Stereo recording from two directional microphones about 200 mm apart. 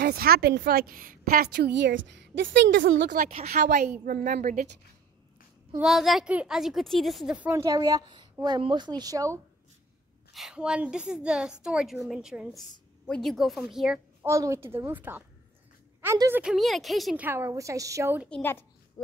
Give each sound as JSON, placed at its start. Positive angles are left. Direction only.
{"t": 0.0, "sound": "a woman's voice", "side_deg": -50}
{"t": 3.3, "sound": "speech", "side_deg": -45}
{"t": 5.8, "sound": "a woman's voice", "side_deg": 0}
{"t": 10.3, "sound": "a woman's voice", "side_deg": -5}
{"t": 18.3, "sound": "a child's voice", "side_deg": 10}